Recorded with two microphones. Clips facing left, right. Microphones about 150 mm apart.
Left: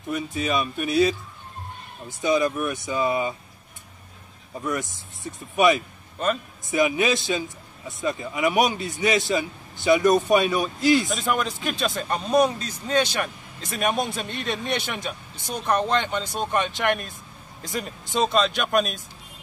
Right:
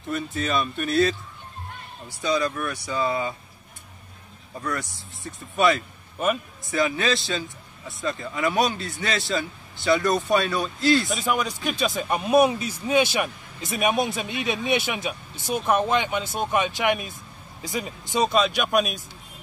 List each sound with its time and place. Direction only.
0.1 s a man's voice: 10° left (ahead or behind)
2.2 s a man's voice: 20° left (ahead or behind)
4.6 s a man's voice: 20° left (ahead or behind)
6.1 s a man's voice: 10° right (ahead or behind)
6.7 s a man's voice: 15° left (ahead or behind)
11.1 s speech: centre (ahead or behind)
12.1 s speech: 10° right (ahead or behind)